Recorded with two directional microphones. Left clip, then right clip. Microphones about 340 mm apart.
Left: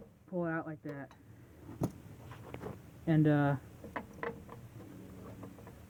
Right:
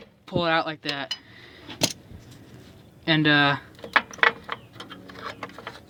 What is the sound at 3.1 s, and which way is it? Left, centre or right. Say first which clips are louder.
Speech: right 11 dB; centre.